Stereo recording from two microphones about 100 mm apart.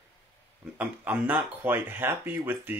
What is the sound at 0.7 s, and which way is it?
Speech, 15° right (ahead or behind).